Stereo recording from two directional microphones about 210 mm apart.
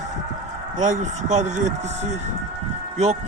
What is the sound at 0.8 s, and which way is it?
Speech, 35° right (ahead or behind).